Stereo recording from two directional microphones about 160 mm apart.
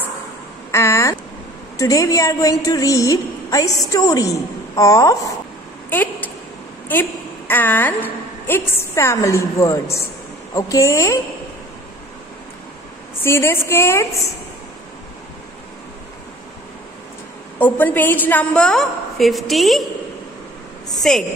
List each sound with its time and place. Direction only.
0.7 s a sound: 20° left (ahead or behind)
1.8 s a woman's voice: 20° left (ahead or behind)
5.9 s a sound: 10° left (ahead or behind)
6.9 s a woman's voice: 10° left (ahead or behind)
13.2 s a woman's voice: 15° left (ahead or behind)
17.6 s a woman's voice: 10° left (ahead or behind)
21.0 s a woman's voice: 5° left (ahead or behind)